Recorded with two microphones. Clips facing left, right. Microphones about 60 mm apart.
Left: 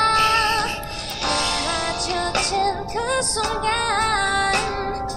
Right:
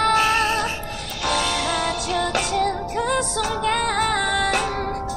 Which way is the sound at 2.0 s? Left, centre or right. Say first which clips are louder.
Right 1 dB; left.